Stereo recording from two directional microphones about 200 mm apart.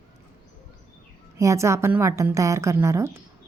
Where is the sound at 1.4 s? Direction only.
15° right (ahead or behind).